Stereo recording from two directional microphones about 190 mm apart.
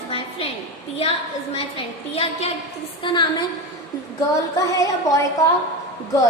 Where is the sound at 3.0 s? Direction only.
25° left (ahead or behind).